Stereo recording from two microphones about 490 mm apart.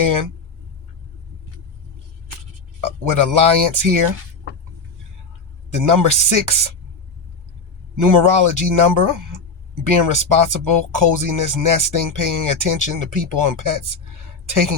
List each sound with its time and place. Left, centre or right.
0.0 s speech: right
2.8 s speech: right
5.7 s speech: right
7.9 s speech: right